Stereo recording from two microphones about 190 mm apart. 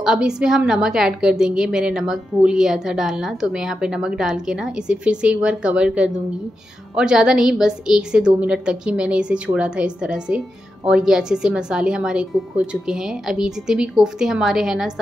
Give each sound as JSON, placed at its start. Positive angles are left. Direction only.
{"t": 0.0, "sound": "a woman's voice", "side_deg": -5}